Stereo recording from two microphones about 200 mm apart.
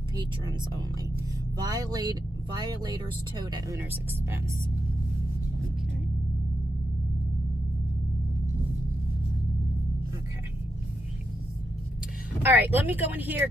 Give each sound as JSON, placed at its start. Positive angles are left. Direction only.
{"t": 0.2, "sound": "speech", "side_deg": -20}
{"t": 12.4, "sound": "speech", "side_deg": -10}